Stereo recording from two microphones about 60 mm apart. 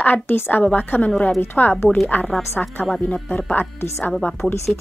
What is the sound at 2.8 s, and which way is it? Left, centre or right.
A woman's voice, left.